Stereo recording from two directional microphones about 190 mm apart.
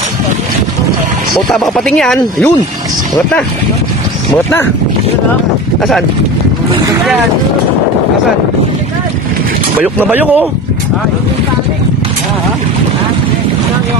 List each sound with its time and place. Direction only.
1.5 s speech: centre (ahead or behind)
9.8 s speech: 10° right (ahead or behind)